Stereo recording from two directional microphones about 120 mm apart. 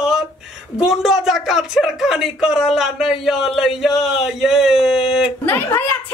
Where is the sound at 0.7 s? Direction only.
5° right (ahead or behind).